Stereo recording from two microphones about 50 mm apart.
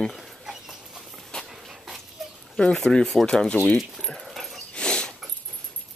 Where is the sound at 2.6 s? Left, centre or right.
Centre.